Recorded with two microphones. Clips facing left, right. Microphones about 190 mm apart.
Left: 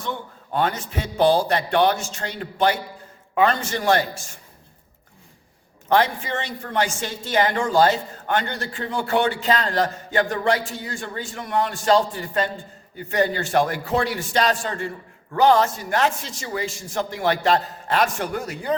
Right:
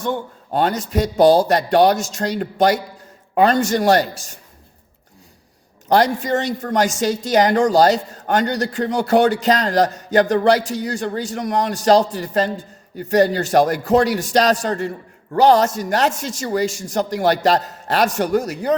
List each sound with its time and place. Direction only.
0.0 s speech: 40° right (ahead or behind)
5.9 s speech: 40° right (ahead or behind)